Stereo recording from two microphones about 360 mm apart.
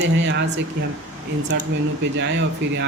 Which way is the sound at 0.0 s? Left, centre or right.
Right.